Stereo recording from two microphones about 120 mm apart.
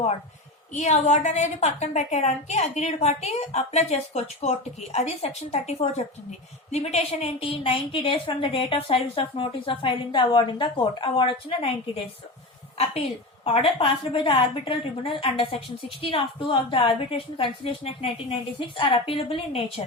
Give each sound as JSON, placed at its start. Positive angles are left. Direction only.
{"t": 0.7, "sound": "a woman's voice", "side_deg": 70}
{"t": 13.4, "sound": "a woman's voice", "side_deg": 50}